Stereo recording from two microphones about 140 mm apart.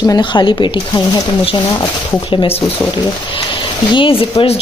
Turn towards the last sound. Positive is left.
turn(degrees=45)  # may be behind; listen again after turning